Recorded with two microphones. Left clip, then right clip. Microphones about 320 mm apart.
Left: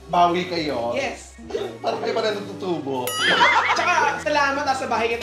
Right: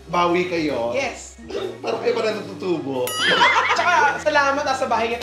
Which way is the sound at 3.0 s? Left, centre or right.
Centre.